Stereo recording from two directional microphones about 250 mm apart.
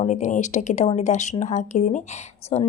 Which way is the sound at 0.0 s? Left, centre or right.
Left.